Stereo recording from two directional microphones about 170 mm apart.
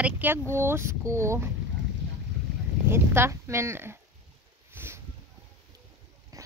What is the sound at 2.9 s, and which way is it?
Speech, 15° right (ahead or behind).